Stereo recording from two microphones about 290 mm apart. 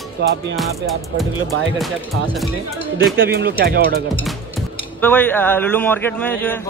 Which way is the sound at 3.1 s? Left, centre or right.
Right.